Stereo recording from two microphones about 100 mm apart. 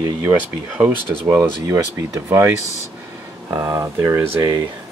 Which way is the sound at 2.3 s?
25° right (ahead or behind).